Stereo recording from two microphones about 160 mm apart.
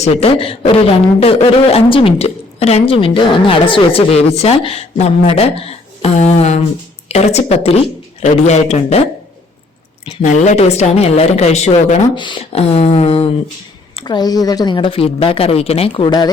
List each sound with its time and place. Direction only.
0.0 s a woman's voice: 40° left (ahead or behind)
10.2 s a woman's voice: 45° left (ahead or behind)
12.1 s a woman's voice: 30° left (ahead or behind)
14.0 s a woman's voice: 25° left (ahead or behind)